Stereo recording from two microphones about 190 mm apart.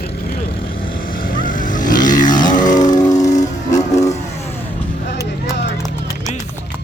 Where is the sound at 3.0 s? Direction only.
20° left (ahead or behind).